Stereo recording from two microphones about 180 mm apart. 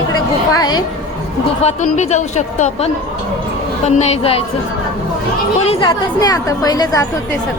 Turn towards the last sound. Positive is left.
turn(degrees=20)  # may be behind; listen again after turning